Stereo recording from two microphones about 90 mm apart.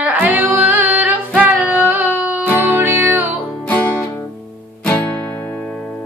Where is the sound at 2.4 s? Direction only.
15° left (ahead or behind).